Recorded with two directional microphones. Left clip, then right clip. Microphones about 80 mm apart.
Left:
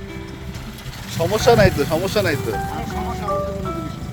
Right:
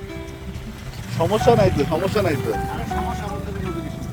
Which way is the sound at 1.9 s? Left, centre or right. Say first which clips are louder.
Left 1 dB; left.